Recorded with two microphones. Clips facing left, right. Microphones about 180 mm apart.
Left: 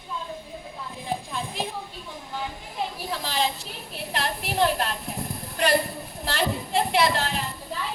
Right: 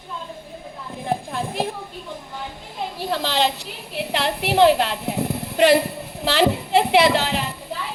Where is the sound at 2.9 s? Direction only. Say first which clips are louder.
Right 9 dB; 70° right (ahead or behind).